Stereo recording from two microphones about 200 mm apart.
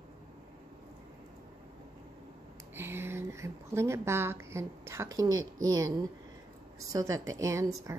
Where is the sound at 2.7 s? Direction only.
10° right (ahead or behind).